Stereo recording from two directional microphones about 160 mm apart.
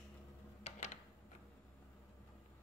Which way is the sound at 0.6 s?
45° left (ahead or behind).